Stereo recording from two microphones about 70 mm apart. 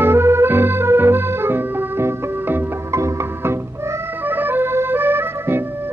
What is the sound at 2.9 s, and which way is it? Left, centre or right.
Music, right.